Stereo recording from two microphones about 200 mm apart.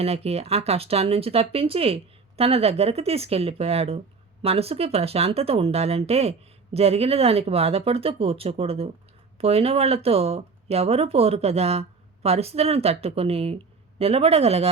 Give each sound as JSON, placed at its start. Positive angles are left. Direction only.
{"t": 0.0, "sound": "speech", "side_deg": -30}